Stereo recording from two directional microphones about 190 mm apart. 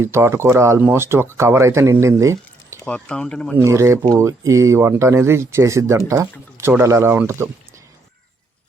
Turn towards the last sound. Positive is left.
turn(degrees=-15)  # may be behind; listen again after turning